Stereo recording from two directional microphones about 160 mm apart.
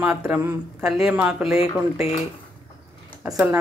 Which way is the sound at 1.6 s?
35° left (ahead or behind).